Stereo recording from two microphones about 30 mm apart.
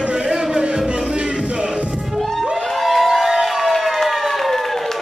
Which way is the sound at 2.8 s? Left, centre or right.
Centre.